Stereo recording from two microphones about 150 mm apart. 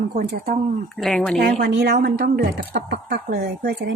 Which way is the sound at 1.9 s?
75° right (ahead or behind).